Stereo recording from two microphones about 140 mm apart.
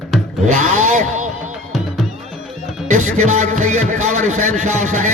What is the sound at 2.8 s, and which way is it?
A man's voice, 55° right (ahead or behind).